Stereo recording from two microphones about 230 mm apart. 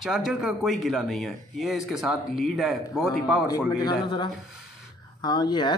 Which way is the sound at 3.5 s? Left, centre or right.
Centre.